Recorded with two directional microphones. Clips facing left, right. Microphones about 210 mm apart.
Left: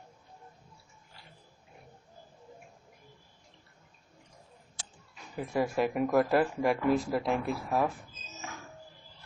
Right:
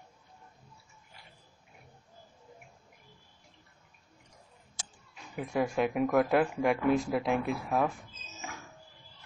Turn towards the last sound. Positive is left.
turn(degrees=0)  # may be behind; listen again after turning